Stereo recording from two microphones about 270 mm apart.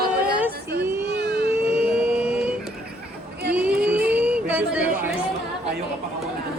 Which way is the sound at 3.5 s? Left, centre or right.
Centre.